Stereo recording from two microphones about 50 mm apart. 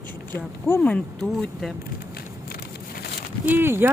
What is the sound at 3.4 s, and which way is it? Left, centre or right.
Speech, right.